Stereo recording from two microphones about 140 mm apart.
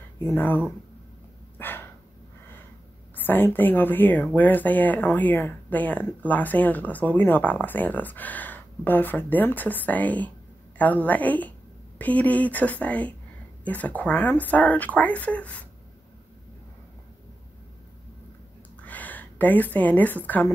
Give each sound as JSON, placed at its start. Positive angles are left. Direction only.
{"t": 0.2, "sound": "speech", "side_deg": 15}
{"t": 1.6, "sound": "dog", "side_deg": 15}
{"t": 3.2, "sound": "speech", "side_deg": 15}
{"t": 18.8, "sound": "a woman's voice", "side_deg": 10}